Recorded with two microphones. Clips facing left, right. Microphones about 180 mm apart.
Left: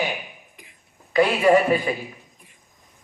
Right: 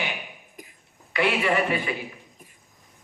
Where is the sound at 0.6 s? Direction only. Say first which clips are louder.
Right 6 dB; 45° right (ahead or behind).